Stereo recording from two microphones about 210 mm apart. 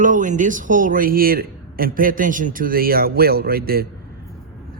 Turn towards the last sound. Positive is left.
turn(degrees=-45)  # may be behind; listen again after turning